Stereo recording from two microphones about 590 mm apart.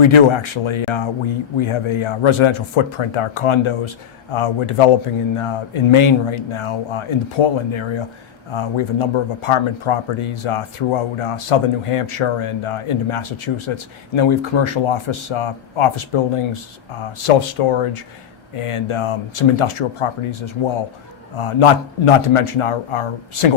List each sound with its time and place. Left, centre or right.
0.0 s speech: left
17.6 s speech: left